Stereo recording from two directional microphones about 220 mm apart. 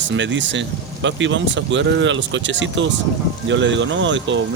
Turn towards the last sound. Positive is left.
turn(degrees=-55)  # may be behind; listen again after turning